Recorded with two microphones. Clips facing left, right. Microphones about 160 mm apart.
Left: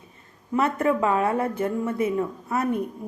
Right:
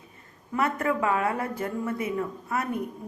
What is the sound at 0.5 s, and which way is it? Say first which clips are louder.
Speech: left 4 dB; 25° left (ahead or behind).